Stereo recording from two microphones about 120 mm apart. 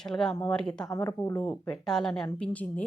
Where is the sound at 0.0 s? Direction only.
5° left (ahead or behind).